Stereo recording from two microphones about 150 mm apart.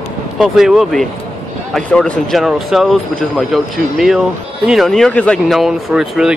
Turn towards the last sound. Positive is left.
turn(degrees=-5)  # may be behind; listen again after turning